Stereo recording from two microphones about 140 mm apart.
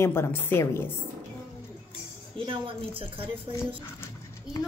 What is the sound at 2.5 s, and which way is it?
Speech, 40° right (ahead or behind).